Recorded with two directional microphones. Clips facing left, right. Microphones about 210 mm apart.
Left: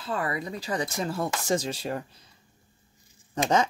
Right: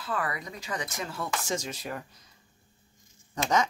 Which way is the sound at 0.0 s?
25° left (ahead or behind).